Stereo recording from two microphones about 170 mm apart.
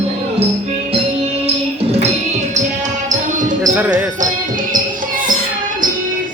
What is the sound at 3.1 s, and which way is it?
Basketball bounce, 50° right (ahead or behind).